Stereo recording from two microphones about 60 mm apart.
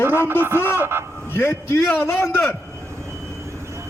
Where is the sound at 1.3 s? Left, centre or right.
Left.